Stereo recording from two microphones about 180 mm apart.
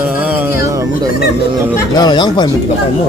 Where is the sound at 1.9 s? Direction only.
25° left (ahead or behind).